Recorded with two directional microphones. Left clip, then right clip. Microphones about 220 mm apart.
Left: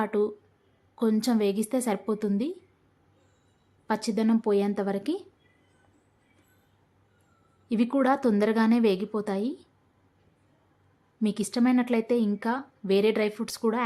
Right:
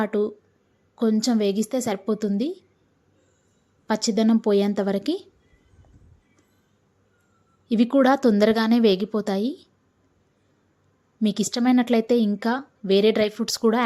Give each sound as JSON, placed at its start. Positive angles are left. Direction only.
{"t": 0.0, "sound": "a woman's voice", "side_deg": -15}
{"t": 3.8, "sound": "a woman's voice", "side_deg": -15}
{"t": 7.7, "sound": "a woman's voice", "side_deg": -15}
{"t": 11.2, "sound": "a woman's voice", "side_deg": -15}